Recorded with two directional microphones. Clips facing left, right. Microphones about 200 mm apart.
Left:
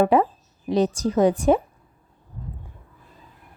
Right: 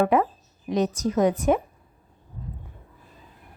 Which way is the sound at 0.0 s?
30° left (ahead or behind).